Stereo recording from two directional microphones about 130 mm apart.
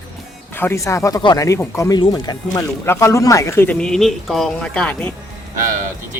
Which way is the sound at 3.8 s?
5° left (ahead or behind).